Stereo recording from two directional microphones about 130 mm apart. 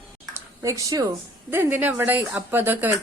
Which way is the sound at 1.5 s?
15° right (ahead or behind).